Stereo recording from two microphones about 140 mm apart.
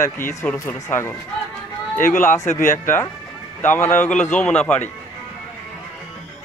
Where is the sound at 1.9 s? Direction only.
70° left (ahead or behind).